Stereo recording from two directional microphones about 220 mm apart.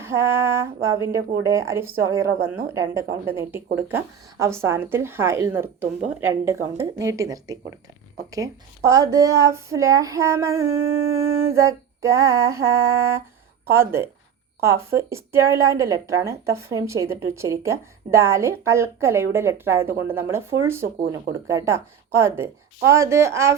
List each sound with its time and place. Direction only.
0.0 s a woman's voice: 10° right (ahead or behind)
10.8 s dog: 65° right (ahead or behind)
11.5 s a woman's voice: 15° right (ahead or behind)